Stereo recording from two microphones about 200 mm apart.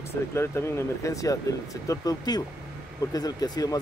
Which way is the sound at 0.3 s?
15° left (ahead or behind).